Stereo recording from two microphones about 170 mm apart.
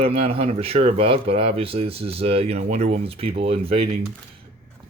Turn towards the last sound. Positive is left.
turn(degrees=-35)  # may be behind; listen again after turning